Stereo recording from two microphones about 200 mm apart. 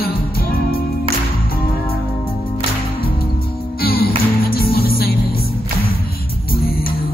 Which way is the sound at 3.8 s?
50° left (ahead or behind).